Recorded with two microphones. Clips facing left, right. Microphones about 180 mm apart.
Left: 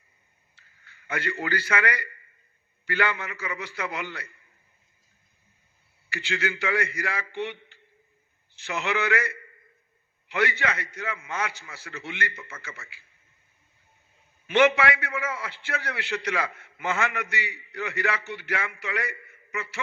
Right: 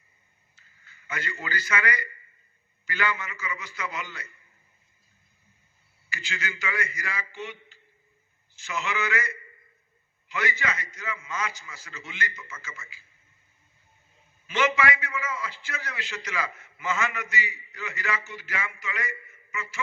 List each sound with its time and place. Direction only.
0.5 s a man's voice: 60° left (ahead or behind)
6.1 s a man's voice: 60° left (ahead or behind)
14.4 s a man's voice: 60° left (ahead or behind)